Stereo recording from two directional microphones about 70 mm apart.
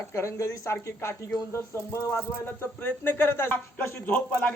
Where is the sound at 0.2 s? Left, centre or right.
Left.